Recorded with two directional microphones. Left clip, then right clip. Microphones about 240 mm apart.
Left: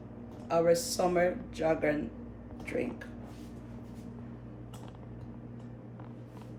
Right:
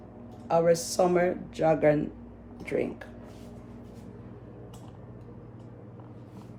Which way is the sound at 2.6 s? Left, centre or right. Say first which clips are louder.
Right 5 dB; right.